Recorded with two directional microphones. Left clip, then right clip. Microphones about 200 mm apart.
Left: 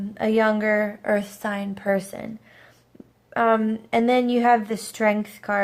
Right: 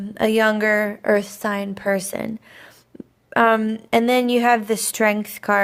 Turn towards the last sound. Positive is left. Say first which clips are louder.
# right 4 dB
turn(degrees=-40)  # may be behind; listen again after turning